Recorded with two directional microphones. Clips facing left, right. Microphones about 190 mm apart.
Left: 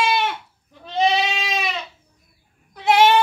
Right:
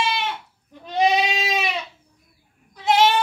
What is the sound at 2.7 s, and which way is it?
Bleat, 60° left (ahead or behind).